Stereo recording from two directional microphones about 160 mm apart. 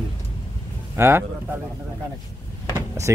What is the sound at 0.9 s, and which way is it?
Speech, 15° right (ahead or behind).